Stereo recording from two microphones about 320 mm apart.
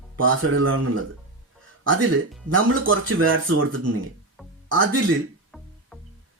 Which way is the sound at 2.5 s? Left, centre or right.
Right.